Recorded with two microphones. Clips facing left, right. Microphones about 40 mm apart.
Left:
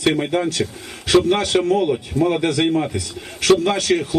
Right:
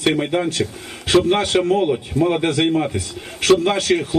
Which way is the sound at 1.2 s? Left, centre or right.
Right.